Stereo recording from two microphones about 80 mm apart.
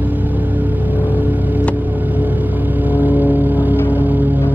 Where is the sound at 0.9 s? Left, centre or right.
Right.